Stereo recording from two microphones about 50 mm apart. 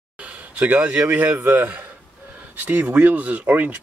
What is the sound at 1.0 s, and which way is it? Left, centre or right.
Speech, right.